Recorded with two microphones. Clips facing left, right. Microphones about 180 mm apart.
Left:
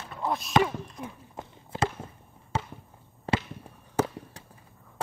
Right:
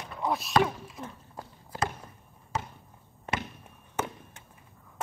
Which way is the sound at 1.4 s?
20° left (ahead or behind).